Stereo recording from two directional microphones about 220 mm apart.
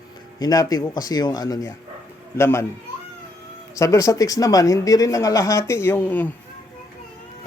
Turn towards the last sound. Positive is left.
turn(degrees=10)  # may be behind; listen again after turning